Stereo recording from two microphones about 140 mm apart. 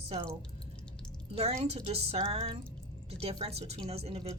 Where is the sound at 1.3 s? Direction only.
50° right (ahead or behind).